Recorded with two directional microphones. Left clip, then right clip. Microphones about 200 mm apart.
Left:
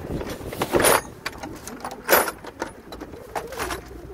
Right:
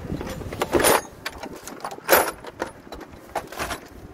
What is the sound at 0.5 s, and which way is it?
Keys jangling, 30° right (ahead or behind).